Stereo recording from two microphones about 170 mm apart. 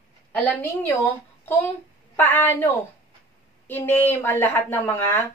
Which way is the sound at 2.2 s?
10° left (ahead or behind).